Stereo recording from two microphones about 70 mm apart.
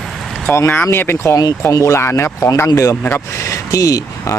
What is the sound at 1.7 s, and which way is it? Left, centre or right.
Speech, left.